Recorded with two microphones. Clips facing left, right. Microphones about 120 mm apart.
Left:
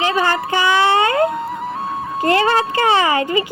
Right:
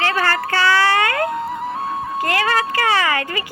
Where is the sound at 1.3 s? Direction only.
Centre (ahead or behind).